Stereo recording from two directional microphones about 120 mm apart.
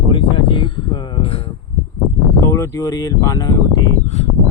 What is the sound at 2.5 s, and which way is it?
Speech, 25° left (ahead or behind).